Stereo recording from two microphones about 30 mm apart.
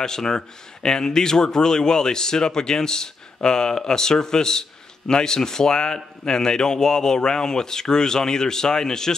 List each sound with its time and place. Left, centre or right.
0.0 s speech: centre